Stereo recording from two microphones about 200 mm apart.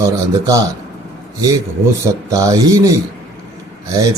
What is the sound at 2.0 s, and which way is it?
Speech, 15° right (ahead or behind).